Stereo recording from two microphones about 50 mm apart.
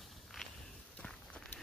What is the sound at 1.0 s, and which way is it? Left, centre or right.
Walk, centre.